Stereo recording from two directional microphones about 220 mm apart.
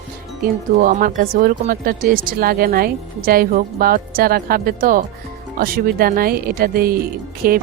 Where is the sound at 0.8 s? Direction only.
40° right (ahead or behind).